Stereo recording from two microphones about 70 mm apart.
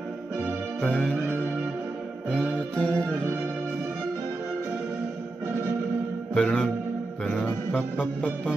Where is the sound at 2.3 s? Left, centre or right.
Centre.